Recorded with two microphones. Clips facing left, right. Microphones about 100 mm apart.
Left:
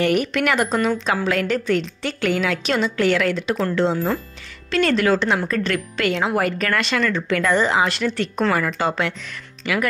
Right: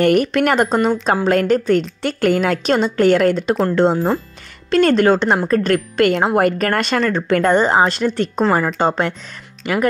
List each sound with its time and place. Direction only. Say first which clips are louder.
0.0 s speech: right 5 dB; 45° right (ahead or behind)